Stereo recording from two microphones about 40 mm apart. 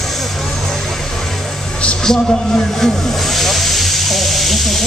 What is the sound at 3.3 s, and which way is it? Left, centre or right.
Hiss, centre.